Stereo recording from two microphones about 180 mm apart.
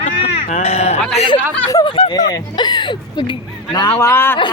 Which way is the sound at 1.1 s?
30° left (ahead or behind).